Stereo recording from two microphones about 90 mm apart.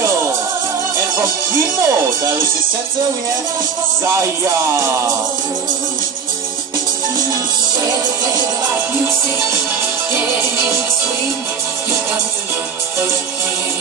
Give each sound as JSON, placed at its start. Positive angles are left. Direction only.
{"t": 0.0, "sound": "music", "side_deg": -30}
{"t": 1.2, "sound": "speech", "side_deg": -40}
{"t": 4.0, "sound": "speech", "side_deg": -35}
{"t": 10.1, "sound": "speech", "side_deg": -30}